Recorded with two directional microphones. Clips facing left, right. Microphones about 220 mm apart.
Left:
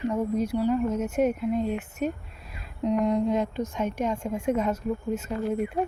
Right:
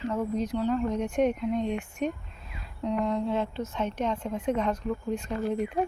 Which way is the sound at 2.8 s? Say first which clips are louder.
Left 4 dB; 15° left (ahead or behind).